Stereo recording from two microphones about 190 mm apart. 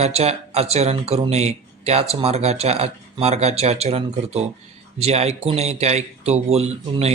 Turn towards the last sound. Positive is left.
turn(degrees=-35)  # may be behind; listen again after turning